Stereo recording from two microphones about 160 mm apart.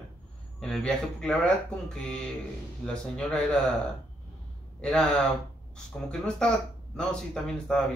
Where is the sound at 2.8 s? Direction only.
5° left (ahead or behind).